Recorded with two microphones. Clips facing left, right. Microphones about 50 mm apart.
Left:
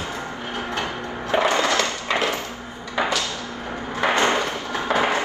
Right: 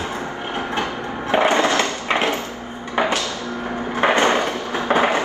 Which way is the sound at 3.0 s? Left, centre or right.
Right.